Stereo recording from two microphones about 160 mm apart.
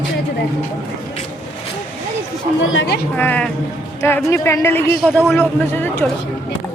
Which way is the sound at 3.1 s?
10° left (ahead or behind).